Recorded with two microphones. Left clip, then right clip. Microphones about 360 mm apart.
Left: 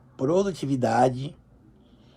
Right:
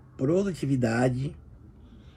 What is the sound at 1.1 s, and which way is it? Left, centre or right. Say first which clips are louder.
Speech: left 3 dB; left.